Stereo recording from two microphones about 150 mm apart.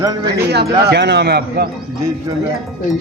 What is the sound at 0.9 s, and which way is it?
Speech, 90° right.